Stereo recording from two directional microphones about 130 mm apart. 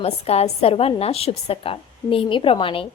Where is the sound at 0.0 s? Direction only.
50° left (ahead or behind).